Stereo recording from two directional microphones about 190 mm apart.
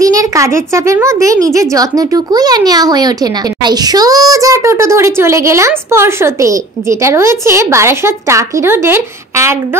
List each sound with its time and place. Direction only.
0.0 s a child's voice: 15° right (ahead or behind)